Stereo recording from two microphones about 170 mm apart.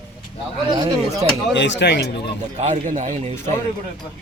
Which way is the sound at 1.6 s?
90° left.